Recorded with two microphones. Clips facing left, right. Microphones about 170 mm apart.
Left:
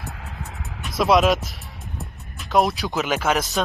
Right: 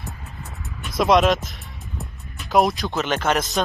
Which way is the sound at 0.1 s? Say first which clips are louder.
Left 2 dB; 75° left (ahead or behind).